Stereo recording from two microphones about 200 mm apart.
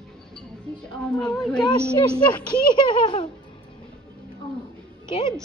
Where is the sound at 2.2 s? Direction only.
25° left (ahead or behind).